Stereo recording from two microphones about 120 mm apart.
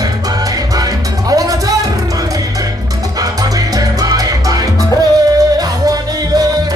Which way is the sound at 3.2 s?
30° right (ahead or behind).